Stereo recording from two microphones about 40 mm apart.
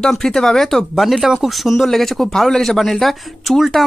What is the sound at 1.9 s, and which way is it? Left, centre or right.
Speech, centre.